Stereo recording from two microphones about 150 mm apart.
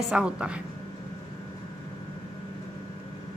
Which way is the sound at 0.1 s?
5° right (ahead or behind).